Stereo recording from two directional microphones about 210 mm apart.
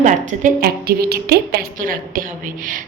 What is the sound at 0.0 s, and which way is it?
A woman's voice, 35° right (ahead or behind).